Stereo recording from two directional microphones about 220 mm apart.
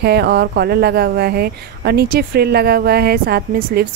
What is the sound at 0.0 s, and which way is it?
A woman's voice, 45° right (ahead or behind).